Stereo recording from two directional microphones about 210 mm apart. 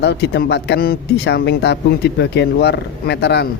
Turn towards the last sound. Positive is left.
turn(degrees=55)  # may be behind; listen again after turning